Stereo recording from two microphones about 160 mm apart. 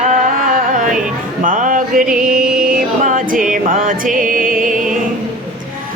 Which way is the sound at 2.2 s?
5° right (ahead or behind).